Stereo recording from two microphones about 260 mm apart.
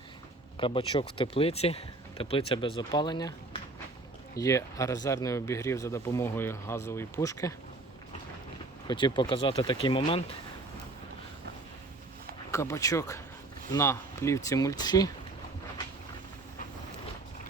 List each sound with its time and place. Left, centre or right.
0.5 s speech: centre
8.9 s speech: centre
12.5 s speech: centre